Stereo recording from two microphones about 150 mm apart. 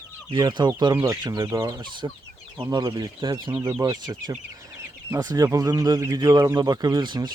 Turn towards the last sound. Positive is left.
turn(degrees=-30)  # may be behind; listen again after turning